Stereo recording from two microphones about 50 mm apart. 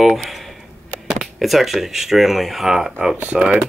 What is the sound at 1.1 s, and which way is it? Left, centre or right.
Speech, centre.